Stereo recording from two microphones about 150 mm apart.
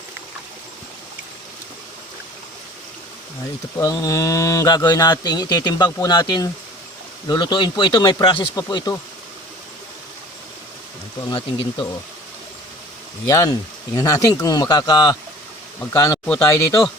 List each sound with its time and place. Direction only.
3.8 s speech: 25° left (ahead or behind)
11.3 s speech: 30° left (ahead or behind)
13.2 s speech: 25° left (ahead or behind)